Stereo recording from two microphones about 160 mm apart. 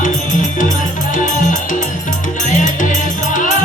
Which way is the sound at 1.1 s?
55° left (ahead or behind).